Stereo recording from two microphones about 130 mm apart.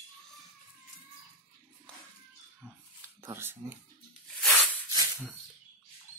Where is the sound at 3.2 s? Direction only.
20° right (ahead or behind).